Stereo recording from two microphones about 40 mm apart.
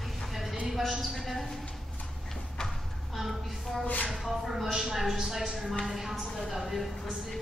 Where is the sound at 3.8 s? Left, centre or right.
Left.